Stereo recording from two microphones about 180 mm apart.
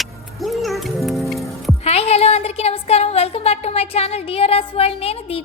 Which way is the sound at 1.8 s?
35° left (ahead or behind).